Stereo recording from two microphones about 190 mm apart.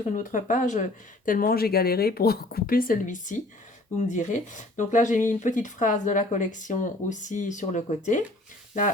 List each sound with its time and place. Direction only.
0.2 s speech: 45° left (ahead or behind)